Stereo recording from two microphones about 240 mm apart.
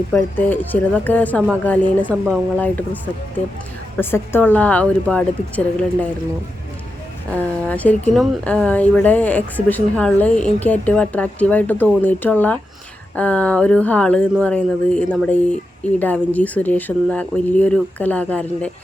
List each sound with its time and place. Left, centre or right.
0.1 s a woman's voice: centre
7.3 s a woman's voice: centre